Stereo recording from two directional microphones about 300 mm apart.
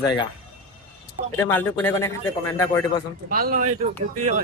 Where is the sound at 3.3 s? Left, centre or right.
Right.